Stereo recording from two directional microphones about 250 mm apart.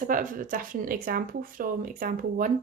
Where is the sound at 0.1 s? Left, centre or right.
Right.